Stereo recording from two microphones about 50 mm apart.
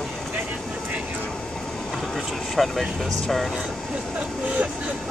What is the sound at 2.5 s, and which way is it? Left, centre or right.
Speech, centre.